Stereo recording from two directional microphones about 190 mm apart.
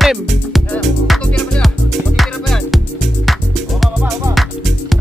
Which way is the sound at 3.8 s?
Centre (ahead or behind).